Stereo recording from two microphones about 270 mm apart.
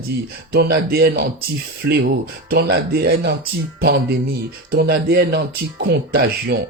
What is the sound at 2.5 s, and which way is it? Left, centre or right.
Speech, right.